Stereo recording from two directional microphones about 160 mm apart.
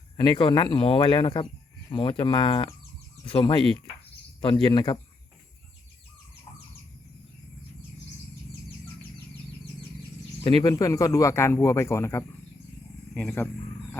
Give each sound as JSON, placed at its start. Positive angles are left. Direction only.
{"t": 0.2, "sound": "speech", "side_deg": 30}
{"t": 10.4, "sound": "speech", "side_deg": 25}